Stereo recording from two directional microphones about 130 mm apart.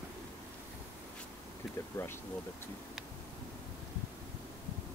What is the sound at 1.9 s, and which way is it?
Speech, 15° left (ahead or behind).